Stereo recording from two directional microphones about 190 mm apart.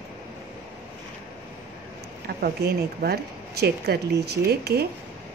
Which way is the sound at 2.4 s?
55° right (ahead or behind).